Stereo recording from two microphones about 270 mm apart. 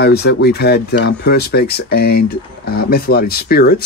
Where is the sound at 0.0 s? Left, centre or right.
Left.